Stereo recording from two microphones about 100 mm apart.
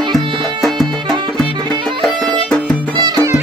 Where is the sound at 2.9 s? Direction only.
45° right (ahead or behind).